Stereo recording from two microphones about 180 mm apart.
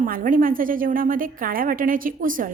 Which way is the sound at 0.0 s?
50° right (ahead or behind).